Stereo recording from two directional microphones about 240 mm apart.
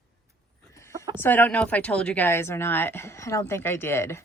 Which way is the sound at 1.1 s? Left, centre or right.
Centre.